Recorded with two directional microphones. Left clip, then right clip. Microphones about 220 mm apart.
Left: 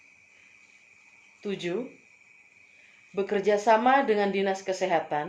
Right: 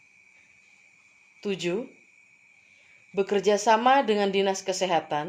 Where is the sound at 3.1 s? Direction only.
45° right (ahead or behind).